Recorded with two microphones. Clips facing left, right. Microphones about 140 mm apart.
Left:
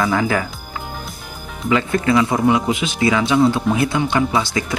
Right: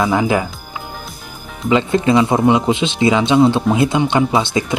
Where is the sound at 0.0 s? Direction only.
20° right (ahead or behind).